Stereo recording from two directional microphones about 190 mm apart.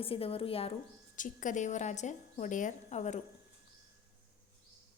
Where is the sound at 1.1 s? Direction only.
40° left (ahead or behind).